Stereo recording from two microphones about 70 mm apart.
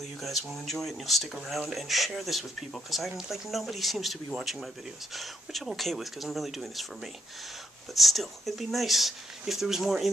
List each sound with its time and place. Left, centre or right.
0.0 s speech: centre